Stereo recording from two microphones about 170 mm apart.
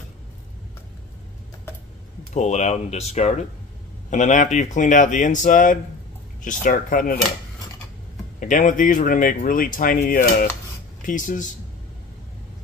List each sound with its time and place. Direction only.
2.3 s speech: 40° left (ahead or behind)
8.4 s speech: 50° left (ahead or behind)